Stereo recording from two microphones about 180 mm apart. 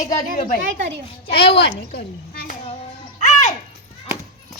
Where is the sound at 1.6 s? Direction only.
70° left (ahead or behind).